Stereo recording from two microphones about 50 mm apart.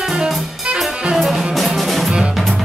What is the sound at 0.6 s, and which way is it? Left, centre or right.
Music, centre.